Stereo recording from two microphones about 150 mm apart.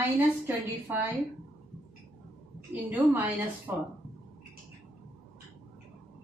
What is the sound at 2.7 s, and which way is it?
A woman's voice, 10° right (ahead or behind).